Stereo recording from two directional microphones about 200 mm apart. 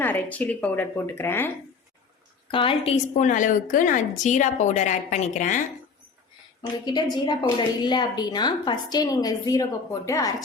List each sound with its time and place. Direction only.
0.0 s speech: 10° left (ahead or behind)
2.5 s a woman's voice: 25° left (ahead or behind)
6.6 s a woman's voice: 20° left (ahead or behind)